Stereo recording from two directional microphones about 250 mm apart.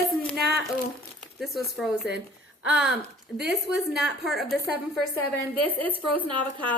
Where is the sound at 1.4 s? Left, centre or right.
Centre.